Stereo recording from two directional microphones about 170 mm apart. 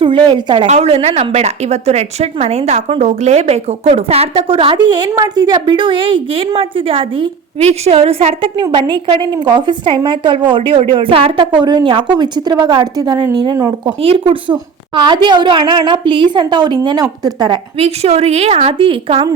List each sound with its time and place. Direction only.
0.0 s a woman's voice: 30° right (ahead or behind)
0.7 s a woman's voice: 35° right (ahead or behind); by 13.9 s 20° right (ahead or behind)
14.0 s a woman's voice: 35° right (ahead or behind)
17.7 s a woman's voice: 35° right (ahead or behind)